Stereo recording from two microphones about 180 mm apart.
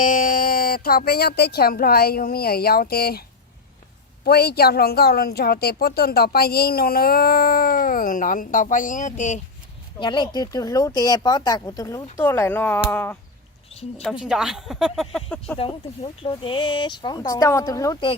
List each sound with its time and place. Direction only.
0.0 s a woman's voice: 50° left (ahead or behind)
10.0 s speech: 25° left (ahead or behind); by 13.1 s 10° left (ahead or behind)
14.0 s speech: centre (ahead or behind)
16.2 s speech: 30° left (ahead or behind)